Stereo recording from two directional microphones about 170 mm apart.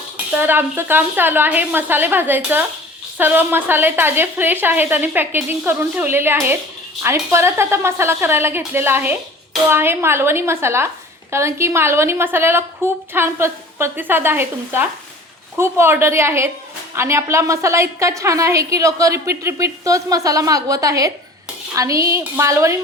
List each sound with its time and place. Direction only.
0.3 s a woman's voice: 10° right (ahead or behind)